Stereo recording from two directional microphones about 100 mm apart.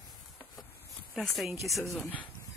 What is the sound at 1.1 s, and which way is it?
Speech, centre (ahead or behind).